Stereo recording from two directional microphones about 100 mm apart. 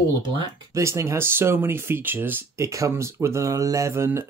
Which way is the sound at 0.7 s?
30° right (ahead or behind).